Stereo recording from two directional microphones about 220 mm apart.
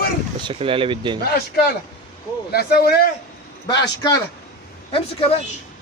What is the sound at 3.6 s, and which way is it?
Speech, 20° left (ahead or behind).